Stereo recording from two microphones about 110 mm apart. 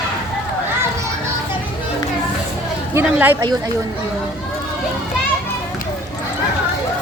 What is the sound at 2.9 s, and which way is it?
Speech, 15° right (ahead or behind).